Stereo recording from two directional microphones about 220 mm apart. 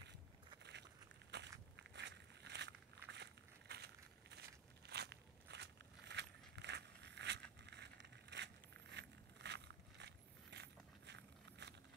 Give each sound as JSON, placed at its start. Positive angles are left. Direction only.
{"t": 1.3, "sound": "walk", "side_deg": -50}